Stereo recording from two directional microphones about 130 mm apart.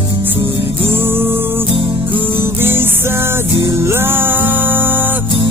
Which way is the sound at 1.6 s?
45° right (ahead or behind).